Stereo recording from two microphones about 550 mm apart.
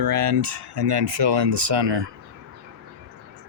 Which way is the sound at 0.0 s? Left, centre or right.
Right.